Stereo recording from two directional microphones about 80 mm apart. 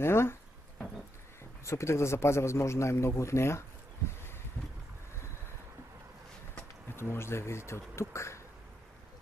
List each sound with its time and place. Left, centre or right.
0.0 s a man's voice: left
1.6 s a man's voice: left
6.9 s a man's voice: left